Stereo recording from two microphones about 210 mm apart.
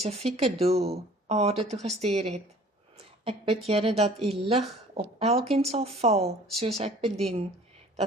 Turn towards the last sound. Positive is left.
turn(degrees=-30)  # may be behind; listen again after turning